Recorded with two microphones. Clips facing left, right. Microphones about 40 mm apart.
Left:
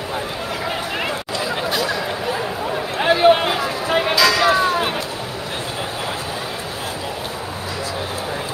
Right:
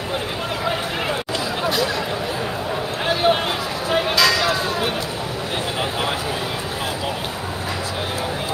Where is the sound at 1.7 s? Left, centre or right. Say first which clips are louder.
Even; centre.